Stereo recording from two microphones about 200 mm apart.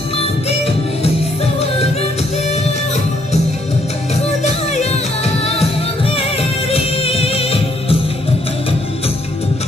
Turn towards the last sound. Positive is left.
turn(degrees=30)  # may be behind; listen again after turning